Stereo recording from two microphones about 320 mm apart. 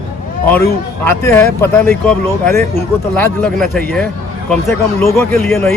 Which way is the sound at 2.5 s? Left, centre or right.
Right.